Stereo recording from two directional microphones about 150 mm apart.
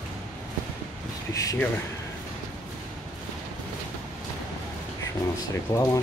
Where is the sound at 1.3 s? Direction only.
25° left (ahead or behind).